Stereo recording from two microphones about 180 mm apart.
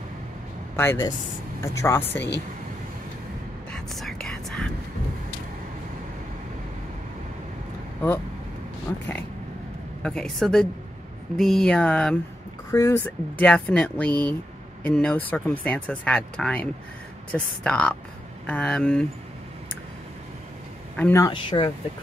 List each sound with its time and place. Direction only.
0.7 s speech: 15° left (ahead or behind)
3.7 s whispering: centre (ahead or behind)
8.0 s speech: 10° left (ahead or behind)
10.0 s a sound: 5° left (ahead or behind)
12.7 s speech: 15° left (ahead or behind)
18.5 s a sound: 5° left (ahead or behind)
20.9 s speech: 5° left (ahead or behind)
21.2 s speech: 25° left (ahead or behind)